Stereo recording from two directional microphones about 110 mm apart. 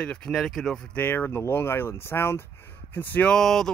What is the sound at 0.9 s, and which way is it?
Speech, 15° left (ahead or behind).